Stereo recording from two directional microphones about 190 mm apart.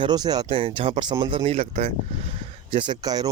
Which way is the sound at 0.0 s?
20° right (ahead or behind).